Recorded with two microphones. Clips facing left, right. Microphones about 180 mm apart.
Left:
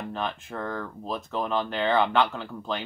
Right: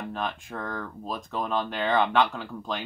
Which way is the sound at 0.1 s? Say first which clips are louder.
Left 1 dB; centre (ahead or behind).